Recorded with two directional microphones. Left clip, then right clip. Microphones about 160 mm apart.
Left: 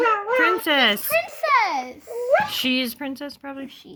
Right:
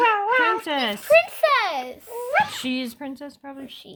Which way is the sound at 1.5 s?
45° right (ahead or behind).